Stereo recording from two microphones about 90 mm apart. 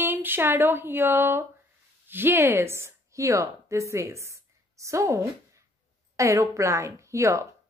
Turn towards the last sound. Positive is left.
turn(degrees=-35)  # may be behind; listen again after turning